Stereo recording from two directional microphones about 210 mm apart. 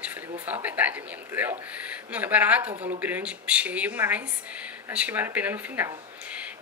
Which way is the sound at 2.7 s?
30° right (ahead or behind).